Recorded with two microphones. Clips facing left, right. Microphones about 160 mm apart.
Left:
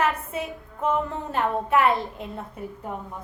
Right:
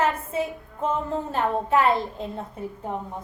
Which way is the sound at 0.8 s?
30° right (ahead or behind).